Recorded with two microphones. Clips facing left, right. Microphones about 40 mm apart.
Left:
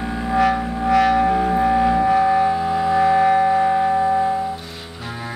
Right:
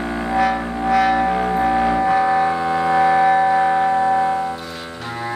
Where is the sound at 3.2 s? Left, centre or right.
Centre.